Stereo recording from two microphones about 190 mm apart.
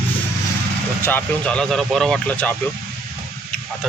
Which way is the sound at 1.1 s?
10° left (ahead or behind).